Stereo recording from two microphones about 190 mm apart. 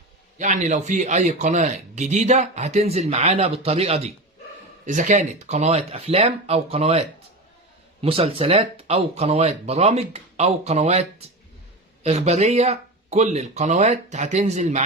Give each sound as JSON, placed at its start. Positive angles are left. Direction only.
{"t": 0.3, "sound": "a man's voice", "side_deg": -40}
{"t": 8.0, "sound": "a man's voice", "side_deg": -30}
{"t": 12.0, "sound": "a man's voice", "side_deg": -35}